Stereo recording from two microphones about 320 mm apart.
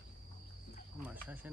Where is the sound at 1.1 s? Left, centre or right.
Centre.